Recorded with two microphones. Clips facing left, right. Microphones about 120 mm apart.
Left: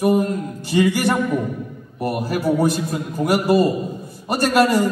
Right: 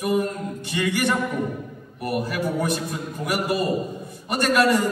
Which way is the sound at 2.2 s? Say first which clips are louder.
Left 10 dB; 35° left (ahead or behind).